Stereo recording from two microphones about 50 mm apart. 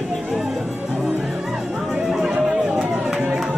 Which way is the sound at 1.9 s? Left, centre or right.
Centre.